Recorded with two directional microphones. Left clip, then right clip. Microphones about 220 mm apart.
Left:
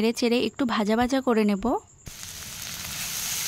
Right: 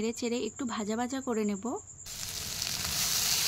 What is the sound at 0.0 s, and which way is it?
Speech, 45° left (ahead or behind).